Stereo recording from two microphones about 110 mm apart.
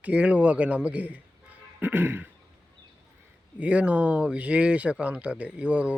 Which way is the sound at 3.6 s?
10° right (ahead or behind).